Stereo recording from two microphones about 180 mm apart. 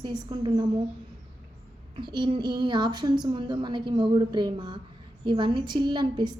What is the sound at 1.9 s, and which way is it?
A woman's voice, 25° right (ahead or behind).